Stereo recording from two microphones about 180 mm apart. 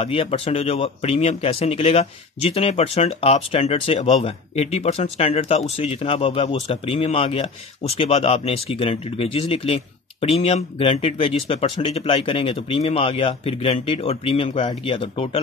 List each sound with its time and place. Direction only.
0.0 s a man's voice: 30° left (ahead or behind)